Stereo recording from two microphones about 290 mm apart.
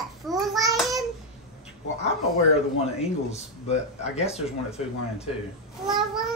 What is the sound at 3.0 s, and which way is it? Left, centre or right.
Speech, left.